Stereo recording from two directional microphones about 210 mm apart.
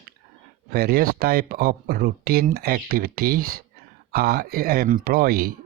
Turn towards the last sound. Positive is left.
turn(degrees=-45)  # may be behind; listen again after turning